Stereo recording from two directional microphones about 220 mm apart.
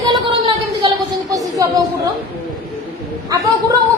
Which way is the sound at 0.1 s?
20° right (ahead or behind).